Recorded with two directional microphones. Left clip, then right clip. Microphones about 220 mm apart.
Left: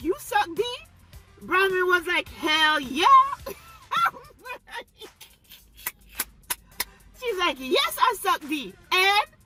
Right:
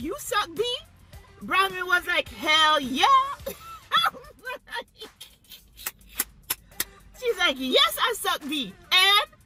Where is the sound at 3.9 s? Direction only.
Centre (ahead or behind).